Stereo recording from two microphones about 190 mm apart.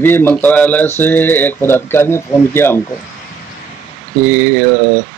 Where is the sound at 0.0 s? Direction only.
10° left (ahead or behind).